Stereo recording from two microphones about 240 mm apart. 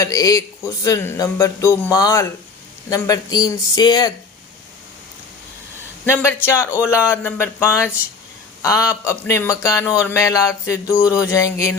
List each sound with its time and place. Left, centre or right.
0.0 s speech: centre
6.1 s speech: centre